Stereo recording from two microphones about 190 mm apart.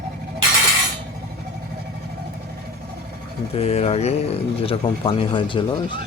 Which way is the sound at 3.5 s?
35° left (ahead or behind).